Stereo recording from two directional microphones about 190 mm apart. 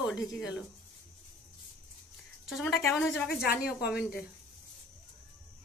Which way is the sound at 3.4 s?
55° left (ahead or behind).